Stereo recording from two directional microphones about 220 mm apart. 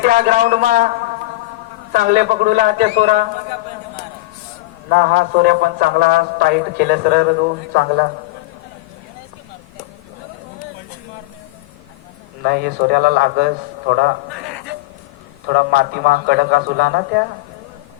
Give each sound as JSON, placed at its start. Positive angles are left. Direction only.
{"t": 0.0, "sound": "a man's voice", "side_deg": -35}
{"t": 1.9, "sound": "a man's voice", "side_deg": -35}
{"t": 4.9, "sound": "a man's voice", "side_deg": -45}
{"t": 12.4, "sound": "a man's voice", "side_deg": -45}
{"t": 15.4, "sound": "a man's voice", "side_deg": -45}